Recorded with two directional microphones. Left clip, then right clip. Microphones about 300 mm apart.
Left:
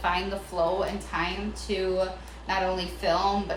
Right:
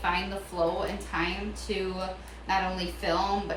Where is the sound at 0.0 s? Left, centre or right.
Centre.